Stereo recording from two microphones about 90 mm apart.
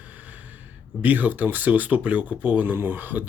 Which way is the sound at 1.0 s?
20° right (ahead or behind).